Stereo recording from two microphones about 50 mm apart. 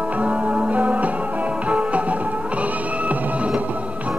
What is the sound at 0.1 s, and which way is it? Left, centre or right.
Music, right.